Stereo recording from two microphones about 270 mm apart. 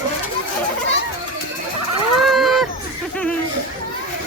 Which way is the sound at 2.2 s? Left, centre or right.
Centre.